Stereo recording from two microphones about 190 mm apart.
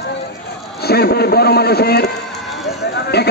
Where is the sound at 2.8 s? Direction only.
60° left (ahead or behind).